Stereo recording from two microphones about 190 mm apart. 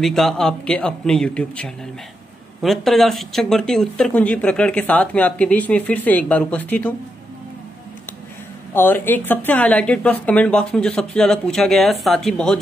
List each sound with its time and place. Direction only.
0.0 s speech: centre (ahead or behind)
8.7 s speech: 10° left (ahead or behind)